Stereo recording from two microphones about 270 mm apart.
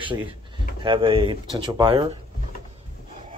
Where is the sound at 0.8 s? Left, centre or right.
Centre.